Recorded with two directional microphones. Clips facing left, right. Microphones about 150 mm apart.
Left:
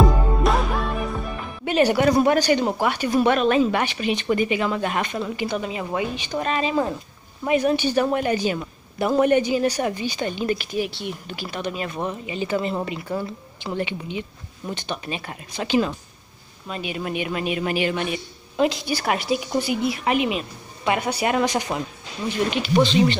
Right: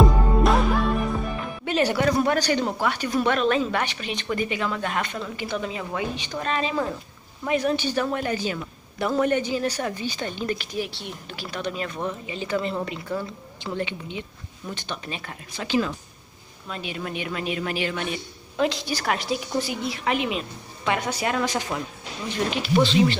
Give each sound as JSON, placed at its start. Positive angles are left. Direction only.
{"t": 0.0, "sound": "music", "side_deg": 0}
{"t": 1.7, "sound": "a woman's voice", "side_deg": 10}
{"t": 22.5, "sound": "speech", "side_deg": 0}